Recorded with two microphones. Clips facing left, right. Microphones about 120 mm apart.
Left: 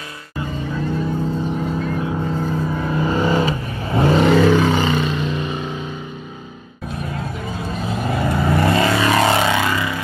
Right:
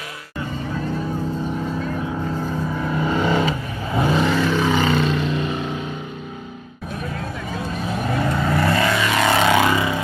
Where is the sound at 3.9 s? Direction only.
60° left (ahead or behind).